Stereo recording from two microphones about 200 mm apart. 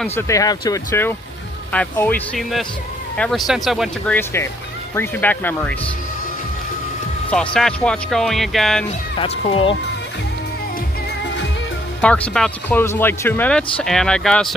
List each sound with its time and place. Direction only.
0.0 s speech: 15° left (ahead or behind)
7.5 s speech: 5° left (ahead or behind)
9.2 s speech: 25° left (ahead or behind)
12.0 s speech: 5° left (ahead or behind)